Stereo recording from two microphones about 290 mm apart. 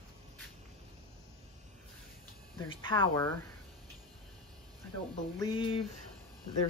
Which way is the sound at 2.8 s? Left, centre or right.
Centre.